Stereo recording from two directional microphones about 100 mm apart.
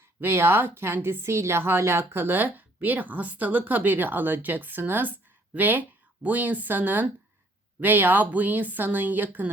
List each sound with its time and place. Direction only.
0.2 s a woman's voice: 25° right (ahead or behind)